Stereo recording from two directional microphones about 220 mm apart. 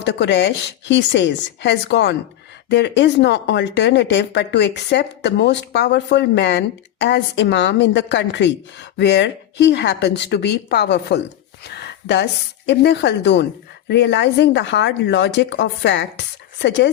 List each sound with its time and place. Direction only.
0.0 s speech: 50° left (ahead or behind)